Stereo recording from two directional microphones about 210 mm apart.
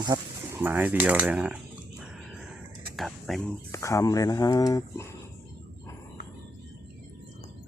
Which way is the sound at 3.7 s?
15° left (ahead or behind).